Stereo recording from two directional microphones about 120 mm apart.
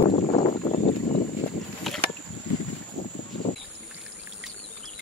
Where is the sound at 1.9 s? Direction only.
Centre (ahead or behind).